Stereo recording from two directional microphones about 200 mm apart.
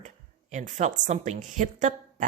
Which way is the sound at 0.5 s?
35° right (ahead or behind).